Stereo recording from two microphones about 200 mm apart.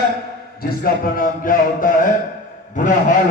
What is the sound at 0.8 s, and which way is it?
A man's voice, 45° left (ahead or behind).